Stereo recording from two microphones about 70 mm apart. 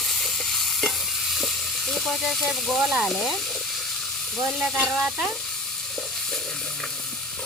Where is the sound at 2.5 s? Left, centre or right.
Centre.